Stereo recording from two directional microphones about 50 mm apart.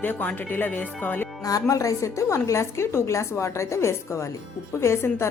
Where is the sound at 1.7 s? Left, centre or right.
Left.